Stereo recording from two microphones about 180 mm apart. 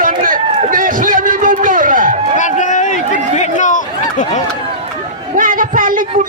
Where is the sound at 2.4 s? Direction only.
45° left (ahead or behind).